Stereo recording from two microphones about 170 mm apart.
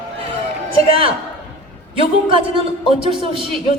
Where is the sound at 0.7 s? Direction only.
35° right (ahead or behind).